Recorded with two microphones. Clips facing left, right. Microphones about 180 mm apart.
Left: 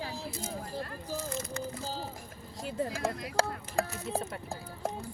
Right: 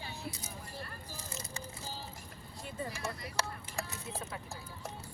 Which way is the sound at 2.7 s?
90° left.